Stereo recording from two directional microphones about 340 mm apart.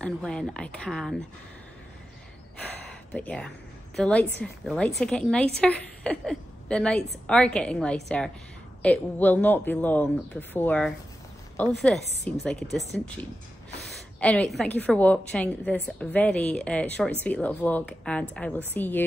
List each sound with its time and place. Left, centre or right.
0.0 s a woman's voice: centre
3.1 s a woman's voice: centre